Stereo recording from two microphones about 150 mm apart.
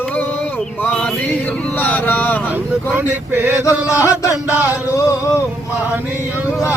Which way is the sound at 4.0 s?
20° left (ahead or behind).